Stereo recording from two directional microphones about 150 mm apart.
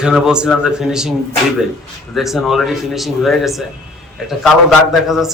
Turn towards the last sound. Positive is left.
turn(degrees=0)  # may be behind; listen again after turning